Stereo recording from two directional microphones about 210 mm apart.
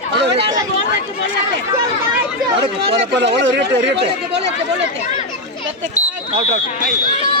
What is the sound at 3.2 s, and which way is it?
Speech, 55° right (ahead or behind).